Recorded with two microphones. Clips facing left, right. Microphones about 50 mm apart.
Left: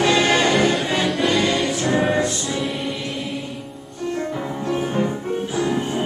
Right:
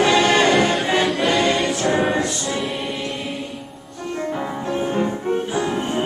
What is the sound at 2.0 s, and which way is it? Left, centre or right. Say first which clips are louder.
Music: even; centre.